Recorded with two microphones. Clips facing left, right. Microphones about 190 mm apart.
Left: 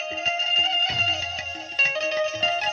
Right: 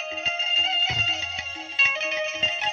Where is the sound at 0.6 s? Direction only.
40° left (ahead or behind).